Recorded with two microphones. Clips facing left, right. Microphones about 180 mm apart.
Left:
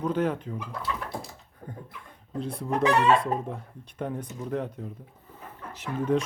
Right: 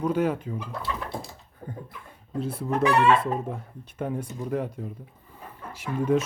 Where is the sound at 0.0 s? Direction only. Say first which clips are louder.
Right 2 dB; 10° right (ahead or behind).